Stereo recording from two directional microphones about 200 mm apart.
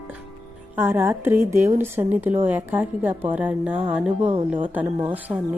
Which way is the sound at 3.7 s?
30° right (ahead or behind).